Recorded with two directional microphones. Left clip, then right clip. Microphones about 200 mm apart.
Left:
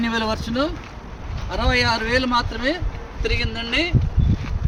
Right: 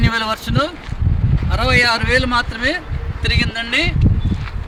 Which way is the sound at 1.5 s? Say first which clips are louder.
Right 5 dB; 20° right (ahead or behind).